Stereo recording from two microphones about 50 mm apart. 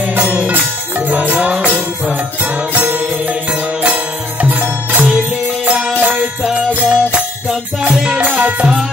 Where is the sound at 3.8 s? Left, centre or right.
Right.